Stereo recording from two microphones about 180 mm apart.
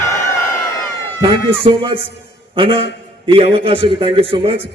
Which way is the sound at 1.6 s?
30° right (ahead or behind).